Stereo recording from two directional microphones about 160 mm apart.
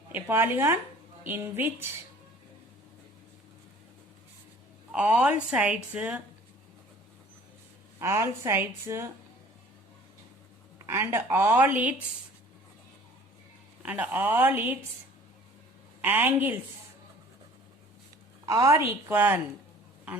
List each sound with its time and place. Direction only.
0.1 s a woman's voice: 15° right (ahead or behind)
4.9 s a woman's voice: 5° right (ahead or behind)
7.9 s a woman's voice: 15° right (ahead or behind)
10.8 s a woman's voice: 15° right (ahead or behind)
13.8 s a woman's voice: 10° right (ahead or behind)
16.0 s a woman's voice: 10° right (ahead or behind)
18.4 s a woman's voice: 20° right (ahead or behind)